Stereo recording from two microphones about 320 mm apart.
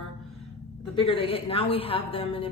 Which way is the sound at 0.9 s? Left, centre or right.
Centre.